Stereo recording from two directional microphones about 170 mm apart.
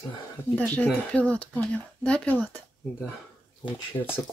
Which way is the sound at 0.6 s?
10° left (ahead or behind).